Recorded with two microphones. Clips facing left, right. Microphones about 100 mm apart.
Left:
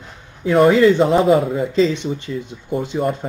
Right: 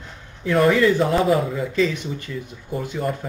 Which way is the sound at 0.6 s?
25° left (ahead or behind).